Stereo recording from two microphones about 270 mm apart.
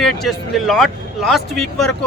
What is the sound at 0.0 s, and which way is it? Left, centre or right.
Speech, centre.